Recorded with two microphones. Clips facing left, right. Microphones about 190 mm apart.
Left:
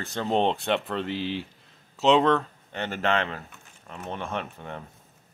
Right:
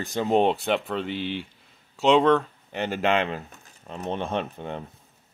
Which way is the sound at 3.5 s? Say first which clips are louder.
Right 4 dB; 30° right (ahead or behind).